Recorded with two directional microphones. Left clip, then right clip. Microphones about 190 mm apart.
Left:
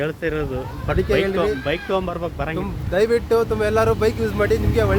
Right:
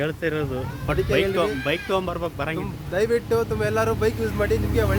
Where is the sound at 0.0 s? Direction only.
15° right (ahead or behind).